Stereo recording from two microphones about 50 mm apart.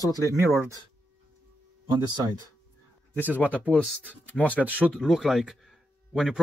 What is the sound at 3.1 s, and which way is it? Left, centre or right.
Speech, right.